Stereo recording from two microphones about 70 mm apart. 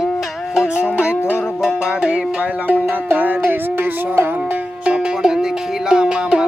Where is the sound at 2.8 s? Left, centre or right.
Right.